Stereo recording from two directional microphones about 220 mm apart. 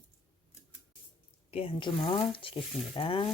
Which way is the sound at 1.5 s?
25° left (ahead or behind).